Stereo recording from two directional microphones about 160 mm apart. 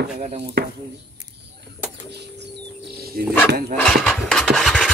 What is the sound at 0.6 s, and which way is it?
Speech, 90° right.